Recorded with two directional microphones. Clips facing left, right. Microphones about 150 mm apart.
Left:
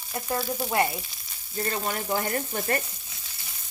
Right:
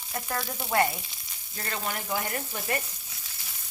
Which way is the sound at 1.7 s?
45° left (ahead or behind).